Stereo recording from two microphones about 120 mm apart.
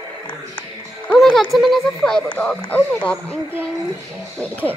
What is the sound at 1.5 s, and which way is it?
Speech, centre (ahead or behind).